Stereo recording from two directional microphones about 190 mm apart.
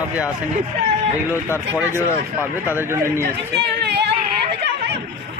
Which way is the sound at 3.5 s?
60° right (ahead or behind).